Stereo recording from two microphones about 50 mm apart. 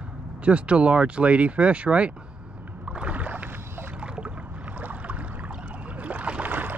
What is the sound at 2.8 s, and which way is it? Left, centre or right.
Rowboat, right.